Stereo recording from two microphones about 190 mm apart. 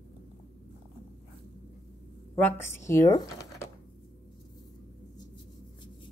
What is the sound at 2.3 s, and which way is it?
Speech, 10° left (ahead or behind).